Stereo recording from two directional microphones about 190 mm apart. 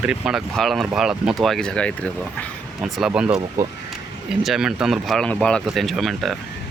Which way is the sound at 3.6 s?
15° right (ahead or behind).